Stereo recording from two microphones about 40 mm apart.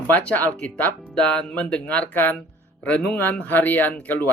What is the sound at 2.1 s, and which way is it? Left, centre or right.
Speech, left.